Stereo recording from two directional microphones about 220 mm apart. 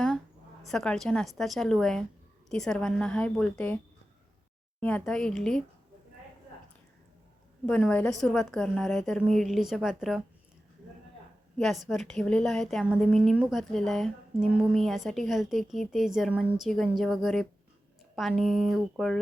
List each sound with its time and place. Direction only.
0.7 s a woman's voice: centre (ahead or behind)
4.8 s a woman's voice: 5° left (ahead or behind)
7.7 s a woman's voice: 5° left (ahead or behind)
11.5 s a woman's voice: centre (ahead or behind)